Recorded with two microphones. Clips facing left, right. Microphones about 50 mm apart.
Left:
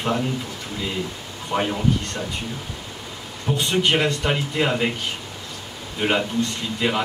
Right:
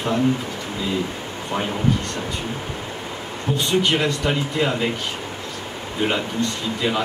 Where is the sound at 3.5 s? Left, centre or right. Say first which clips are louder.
Even; centre.